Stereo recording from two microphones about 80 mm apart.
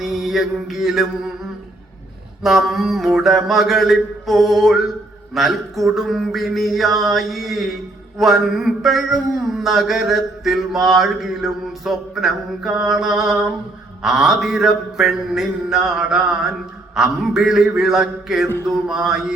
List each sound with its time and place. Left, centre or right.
0.0 s mantra: centre
2.4 s mantra: centre
16.9 s a sound: centre